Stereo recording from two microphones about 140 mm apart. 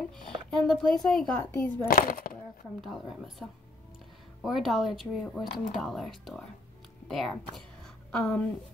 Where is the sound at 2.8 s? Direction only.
Centre (ahead or behind).